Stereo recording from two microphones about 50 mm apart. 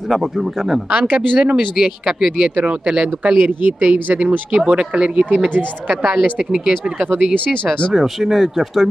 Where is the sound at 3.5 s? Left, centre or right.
Right.